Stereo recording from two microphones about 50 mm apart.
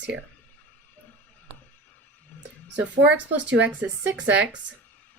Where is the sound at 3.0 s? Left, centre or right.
Right.